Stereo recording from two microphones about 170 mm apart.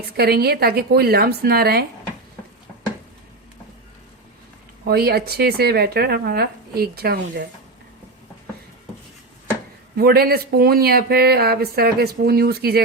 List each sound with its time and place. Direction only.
0.2 s speech: 65° right (ahead or behind)
4.9 s speech: 65° right (ahead or behind)
10.0 s speech: 65° right (ahead or behind)